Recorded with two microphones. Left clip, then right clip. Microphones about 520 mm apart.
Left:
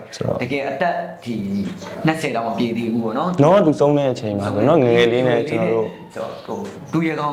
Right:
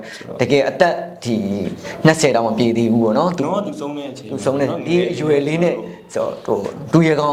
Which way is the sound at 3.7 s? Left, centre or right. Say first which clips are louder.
Left 11 dB; left.